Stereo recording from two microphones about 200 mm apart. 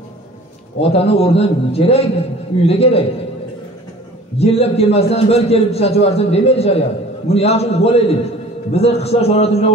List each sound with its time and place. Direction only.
0.7 s a man's voice: 30° left (ahead or behind)
4.4 s a man's voice: 30° left (ahead or behind)